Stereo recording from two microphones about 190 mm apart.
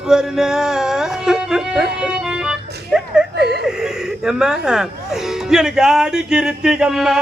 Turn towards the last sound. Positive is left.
turn(degrees=-5)  # may be behind; listen again after turning